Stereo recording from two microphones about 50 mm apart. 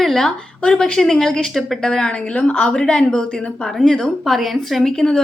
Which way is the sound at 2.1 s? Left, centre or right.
Left.